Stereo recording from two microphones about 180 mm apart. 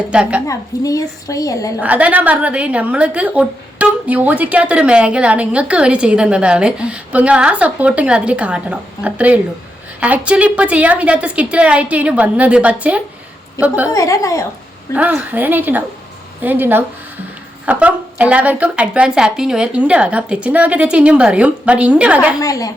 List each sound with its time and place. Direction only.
0.1 s a woman's voice: 5° right (ahead or behind)
0.4 s a woman's voice: 20° left (ahead or behind)
1.8 s a woman's voice: 10° right (ahead or behind)
13.9 s a woman's voice: 20° left (ahead or behind)
14.9 s a woman's voice: 10° right (ahead or behind)
22.4 s a woman's voice: 20° left (ahead or behind)